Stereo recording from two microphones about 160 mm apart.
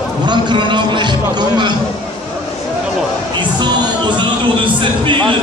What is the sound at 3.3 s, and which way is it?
Music, 30° right (ahead or behind).